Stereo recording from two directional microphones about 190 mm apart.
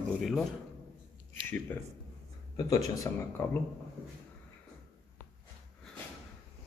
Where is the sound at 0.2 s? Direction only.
Centre (ahead or behind).